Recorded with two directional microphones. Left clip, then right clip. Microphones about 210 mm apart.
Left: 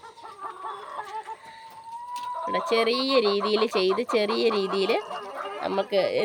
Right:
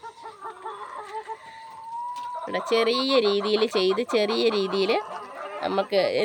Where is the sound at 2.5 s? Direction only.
5° right (ahead or behind).